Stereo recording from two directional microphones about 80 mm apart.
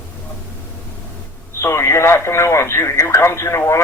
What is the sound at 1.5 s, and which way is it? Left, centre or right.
Speech, left.